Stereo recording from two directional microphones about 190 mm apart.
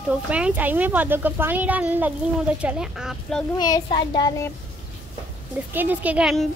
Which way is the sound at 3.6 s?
25° left (ahead or behind).